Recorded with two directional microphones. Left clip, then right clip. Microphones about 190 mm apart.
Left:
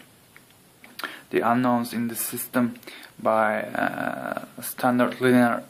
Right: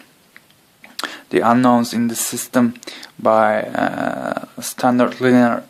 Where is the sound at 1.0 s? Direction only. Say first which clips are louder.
Right 7 dB; 35° right (ahead or behind).